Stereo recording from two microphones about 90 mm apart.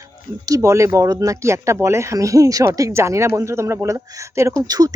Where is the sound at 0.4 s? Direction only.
40° right (ahead or behind).